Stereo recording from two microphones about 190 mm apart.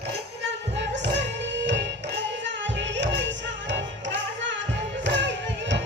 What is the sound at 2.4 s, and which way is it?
Music, 70° right (ahead or behind).